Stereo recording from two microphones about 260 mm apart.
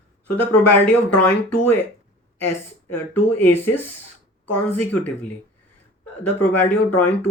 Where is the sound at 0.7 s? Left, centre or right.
Left.